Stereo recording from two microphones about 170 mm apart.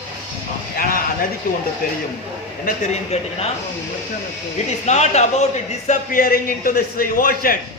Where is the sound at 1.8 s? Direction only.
60° left (ahead or behind).